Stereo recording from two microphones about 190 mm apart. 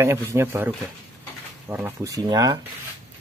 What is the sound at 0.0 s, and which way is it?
Speech, 15° right (ahead or behind).